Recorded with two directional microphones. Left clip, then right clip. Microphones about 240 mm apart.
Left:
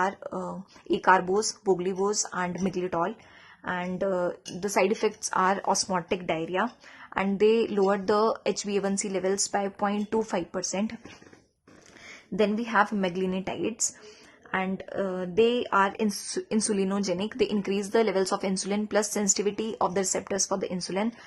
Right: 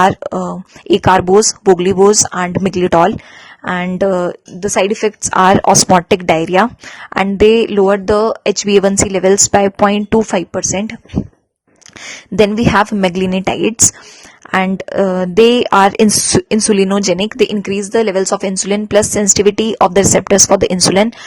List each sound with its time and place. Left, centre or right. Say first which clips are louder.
0.0 s speech: right 17 dB; right
12.0 s speech: right 15 dB; right